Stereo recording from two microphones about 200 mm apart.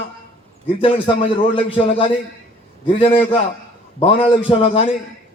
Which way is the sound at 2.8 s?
25° left (ahead or behind).